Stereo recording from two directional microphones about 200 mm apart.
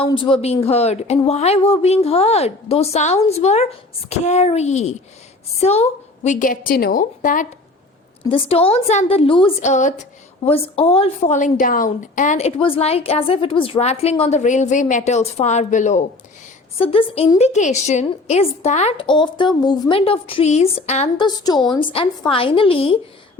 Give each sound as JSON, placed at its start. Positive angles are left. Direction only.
{"t": 0.3, "sound": "a woman's voice", "side_deg": 30}
{"t": 8.2, "sound": "a woman's voice", "side_deg": 30}
{"t": 21.2, "sound": "a woman's voice", "side_deg": 20}